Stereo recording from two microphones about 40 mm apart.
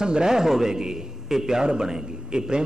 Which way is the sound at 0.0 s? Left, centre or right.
Centre.